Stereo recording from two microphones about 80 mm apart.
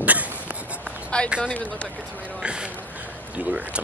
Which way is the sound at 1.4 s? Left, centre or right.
Centre.